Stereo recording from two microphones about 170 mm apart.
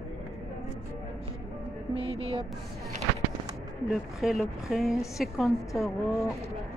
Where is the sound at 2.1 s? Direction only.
35° right (ahead or behind).